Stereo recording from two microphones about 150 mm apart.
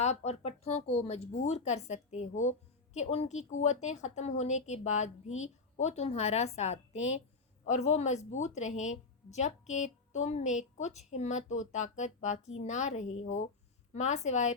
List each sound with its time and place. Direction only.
0.0 s a woman's voice: 45° left (ahead or behind)